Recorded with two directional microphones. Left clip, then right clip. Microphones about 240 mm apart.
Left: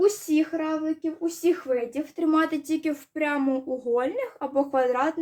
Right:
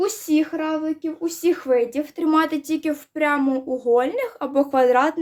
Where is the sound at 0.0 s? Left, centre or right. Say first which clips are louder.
Right 1 dB; right.